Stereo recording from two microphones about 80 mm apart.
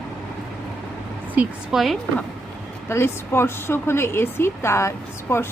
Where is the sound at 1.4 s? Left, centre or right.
Centre.